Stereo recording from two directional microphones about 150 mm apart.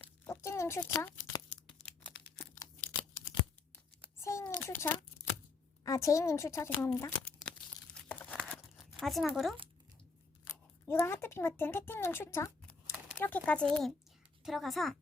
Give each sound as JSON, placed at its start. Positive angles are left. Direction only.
{"t": 0.3, "sound": "a sound", "side_deg": 20}
{"t": 4.0, "sound": "a sound", "side_deg": 20}
{"t": 5.8, "sound": "speech", "side_deg": 20}
{"t": 7.2, "sound": "crumpling", "side_deg": 10}
{"t": 9.3, "sound": "a woman's voice", "side_deg": 0}
{"t": 10.4, "sound": "a woman's voice", "side_deg": 15}